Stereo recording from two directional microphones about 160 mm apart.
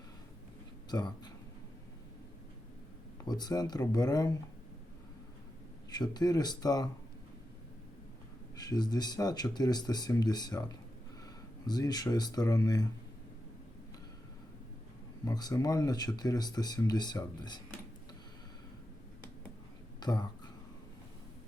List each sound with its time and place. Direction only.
0.9 s speech: 25° left (ahead or behind)
3.2 s speech: 25° left (ahead or behind)
5.9 s speech: 25° left (ahead or behind)
8.5 s speech: 25° left (ahead or behind)
15.2 s speech: 25° left (ahead or behind)
20.0 s speech: 25° left (ahead or behind)